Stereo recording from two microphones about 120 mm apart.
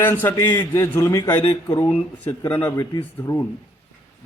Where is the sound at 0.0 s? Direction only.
15° left (ahead or behind).